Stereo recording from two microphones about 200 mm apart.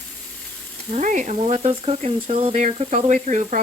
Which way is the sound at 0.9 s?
40° right (ahead or behind).